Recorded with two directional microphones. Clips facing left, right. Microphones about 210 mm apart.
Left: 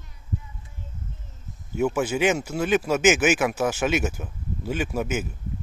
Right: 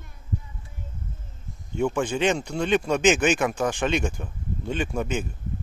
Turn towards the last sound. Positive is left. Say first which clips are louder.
# left 1 dB
turn(degrees=5)  # may be behind; listen again after turning